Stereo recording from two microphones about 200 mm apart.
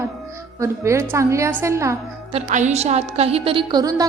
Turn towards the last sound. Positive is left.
turn(degrees=-20)  # may be behind; listen again after turning